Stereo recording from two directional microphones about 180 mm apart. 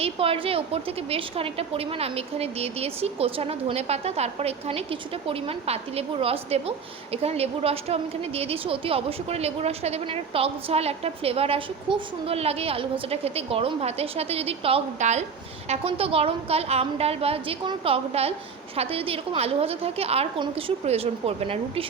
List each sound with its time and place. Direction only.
0.0 s a woman's voice: 30° right (ahead or behind)